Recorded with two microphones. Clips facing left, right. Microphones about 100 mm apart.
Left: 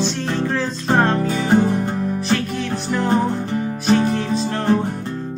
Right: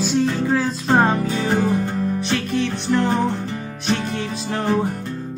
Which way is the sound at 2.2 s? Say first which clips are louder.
Even; centre (ahead or behind).